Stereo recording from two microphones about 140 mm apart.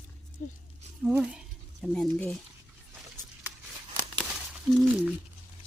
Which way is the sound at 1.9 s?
5° left (ahead or behind).